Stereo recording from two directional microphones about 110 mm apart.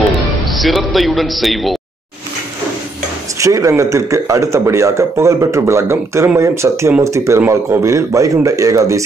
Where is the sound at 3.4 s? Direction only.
30° right (ahead or behind).